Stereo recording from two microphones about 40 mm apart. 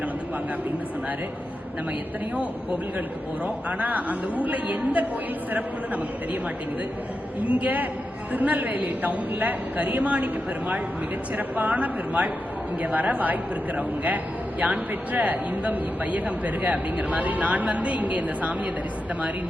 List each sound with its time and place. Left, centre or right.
3.4 s a man's voice: right
7.4 s a woman's voice: right
11.3 s a woman's voice: right
11.7 s a man's voice: right
14.6 s a man's voice: right